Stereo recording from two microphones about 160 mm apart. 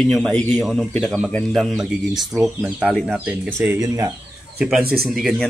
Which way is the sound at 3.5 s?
15° right (ahead or behind).